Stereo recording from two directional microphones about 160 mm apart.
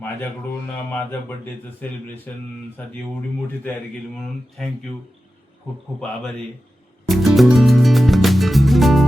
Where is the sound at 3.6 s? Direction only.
10° left (ahead or behind).